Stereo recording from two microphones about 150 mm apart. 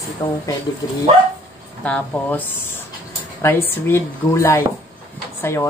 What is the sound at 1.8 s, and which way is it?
A woman's voice, 10° left (ahead or behind).